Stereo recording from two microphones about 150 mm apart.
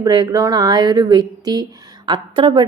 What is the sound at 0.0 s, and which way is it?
Speech, 25° right (ahead or behind).